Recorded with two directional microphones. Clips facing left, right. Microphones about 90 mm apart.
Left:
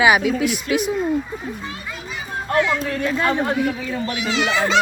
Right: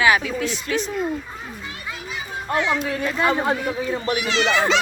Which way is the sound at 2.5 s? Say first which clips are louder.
Left 2 dB; 15° right (ahead or behind).